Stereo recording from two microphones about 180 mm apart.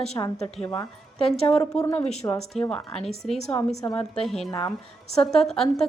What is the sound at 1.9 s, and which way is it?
Speech, 35° left (ahead or behind).